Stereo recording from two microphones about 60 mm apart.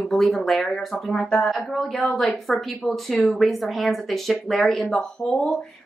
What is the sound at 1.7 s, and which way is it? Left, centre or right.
Speech, centre.